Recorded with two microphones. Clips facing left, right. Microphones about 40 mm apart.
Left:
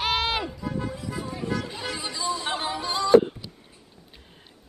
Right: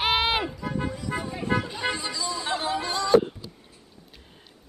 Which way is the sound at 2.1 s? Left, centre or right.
Left.